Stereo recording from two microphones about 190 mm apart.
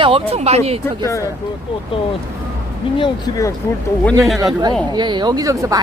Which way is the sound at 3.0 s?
20° left (ahead or behind).